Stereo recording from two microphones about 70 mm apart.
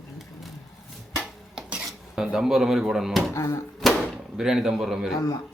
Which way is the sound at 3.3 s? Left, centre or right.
Left.